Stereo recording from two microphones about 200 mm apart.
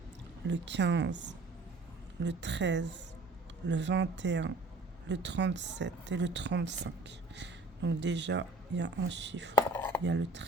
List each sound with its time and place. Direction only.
0.4 s a woman's voice: 65° right (ahead or behind)
9.7 s a sound: 10° left (ahead or behind)
10.0 s a woman's voice: 60° right (ahead or behind)